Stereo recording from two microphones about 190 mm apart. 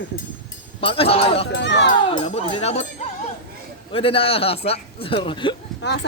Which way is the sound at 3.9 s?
30° left (ahead or behind).